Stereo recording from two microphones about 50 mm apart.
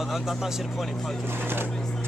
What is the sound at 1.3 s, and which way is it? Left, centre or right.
Speech, right.